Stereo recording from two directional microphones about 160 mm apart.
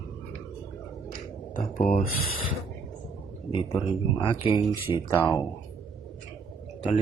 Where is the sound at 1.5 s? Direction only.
50° left (ahead or behind).